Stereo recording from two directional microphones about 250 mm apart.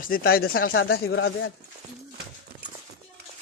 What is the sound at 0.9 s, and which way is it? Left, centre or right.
Speech, left.